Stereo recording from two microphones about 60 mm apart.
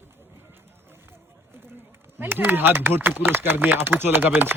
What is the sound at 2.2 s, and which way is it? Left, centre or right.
Speech, right.